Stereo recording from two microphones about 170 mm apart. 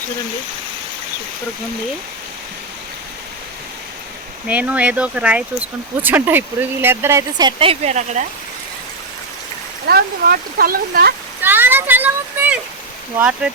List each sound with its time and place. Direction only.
4.4 s speech: 10° right (ahead or behind); by 8.2 s 40° right (ahead or behind)
9.8 s speech: 65° right (ahead or behind)
11.4 s a sound: 10° right (ahead or behind)
13.1 s speech: 5° right (ahead or behind)